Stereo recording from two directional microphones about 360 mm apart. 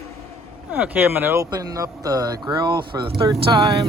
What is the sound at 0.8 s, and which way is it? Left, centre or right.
Speech, centre.